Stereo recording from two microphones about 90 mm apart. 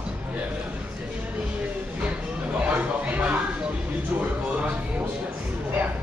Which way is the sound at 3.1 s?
15° right (ahead or behind).